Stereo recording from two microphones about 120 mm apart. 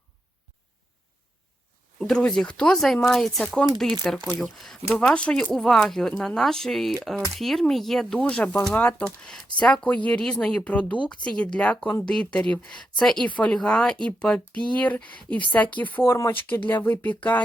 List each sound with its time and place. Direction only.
2.0 s speech: 5° left (ahead or behind)